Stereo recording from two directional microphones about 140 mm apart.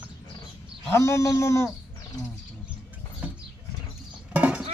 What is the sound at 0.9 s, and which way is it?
Speech, 20° left (ahead or behind).